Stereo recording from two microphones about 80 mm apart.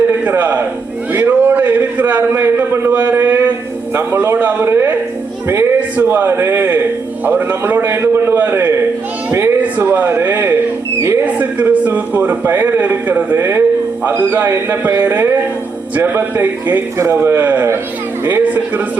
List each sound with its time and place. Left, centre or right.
0.3 s a man's voice: right
1.1 s a sound: right
3.9 s a man's voice: right
11.3 s a man's voice: right